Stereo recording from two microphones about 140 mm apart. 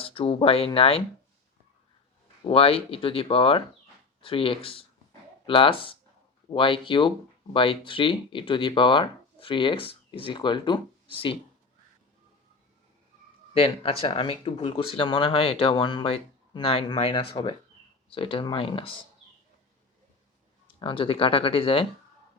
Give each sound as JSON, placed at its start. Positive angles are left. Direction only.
{"t": 0.0, "sound": "speech", "side_deg": 40}
{"t": 2.5, "sound": "speech", "side_deg": 40}
{"t": 13.5, "sound": "speech", "side_deg": 45}
{"t": 20.7, "sound": "speech", "side_deg": 40}